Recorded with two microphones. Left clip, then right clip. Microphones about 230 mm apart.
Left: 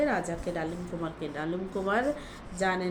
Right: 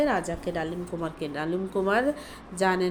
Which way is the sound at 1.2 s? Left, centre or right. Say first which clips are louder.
Right 5 dB; right.